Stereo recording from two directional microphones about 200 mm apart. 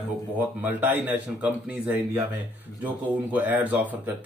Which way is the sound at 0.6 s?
10° right (ahead or behind).